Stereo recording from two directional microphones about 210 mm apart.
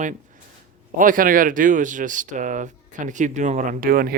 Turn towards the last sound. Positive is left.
turn(degrees=-45)  # may be behind; listen again after turning